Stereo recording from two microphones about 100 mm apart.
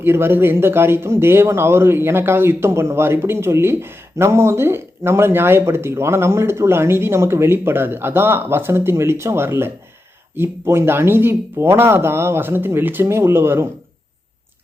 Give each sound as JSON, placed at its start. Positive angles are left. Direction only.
{"t": 0.0, "sound": "speech", "side_deg": -20}